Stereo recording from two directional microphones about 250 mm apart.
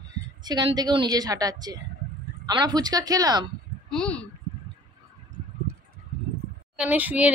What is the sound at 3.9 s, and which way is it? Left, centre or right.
Speech, centre.